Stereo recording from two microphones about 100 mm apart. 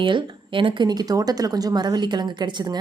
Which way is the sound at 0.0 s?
55° right (ahead or behind).